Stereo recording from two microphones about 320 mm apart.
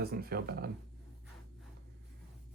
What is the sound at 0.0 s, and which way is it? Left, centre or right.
Speech, right.